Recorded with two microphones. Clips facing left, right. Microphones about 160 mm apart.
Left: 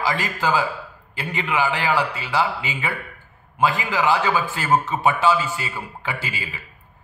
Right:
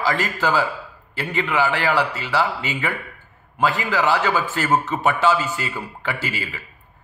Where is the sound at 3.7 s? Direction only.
15° left (ahead or behind).